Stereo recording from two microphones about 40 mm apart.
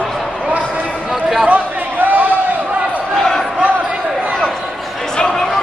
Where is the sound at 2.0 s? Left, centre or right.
Right.